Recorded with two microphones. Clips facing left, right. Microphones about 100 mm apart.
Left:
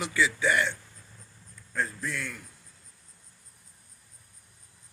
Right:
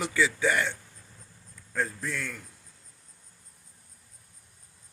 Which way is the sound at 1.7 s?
60° right (ahead or behind).